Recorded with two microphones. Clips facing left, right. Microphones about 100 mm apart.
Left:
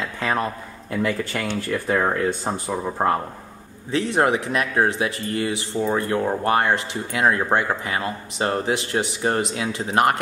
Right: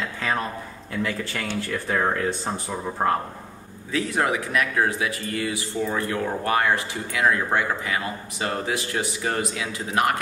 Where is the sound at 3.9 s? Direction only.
30° left (ahead or behind).